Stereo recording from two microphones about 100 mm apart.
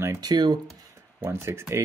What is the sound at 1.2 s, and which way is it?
Speech, 25° right (ahead or behind).